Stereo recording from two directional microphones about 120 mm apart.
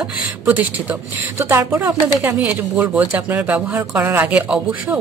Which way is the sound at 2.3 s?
10° right (ahead or behind).